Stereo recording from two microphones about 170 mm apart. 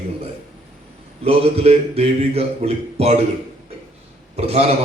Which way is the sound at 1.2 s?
35° right (ahead or behind).